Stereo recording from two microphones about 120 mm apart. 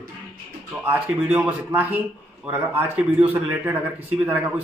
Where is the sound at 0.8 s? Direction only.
10° right (ahead or behind).